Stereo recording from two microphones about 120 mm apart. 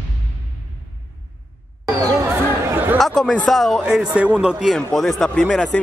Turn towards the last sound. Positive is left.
turn(degrees=10)  # may be behind; listen again after turning